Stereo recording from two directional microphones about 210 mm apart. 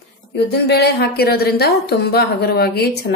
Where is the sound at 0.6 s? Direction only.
50° left (ahead or behind).